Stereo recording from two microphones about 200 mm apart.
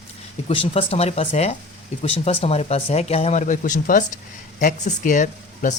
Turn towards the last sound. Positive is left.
turn(degrees=40)  # may be behind; listen again after turning